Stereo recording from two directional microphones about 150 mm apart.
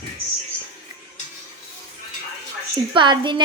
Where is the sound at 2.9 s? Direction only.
30° right (ahead or behind).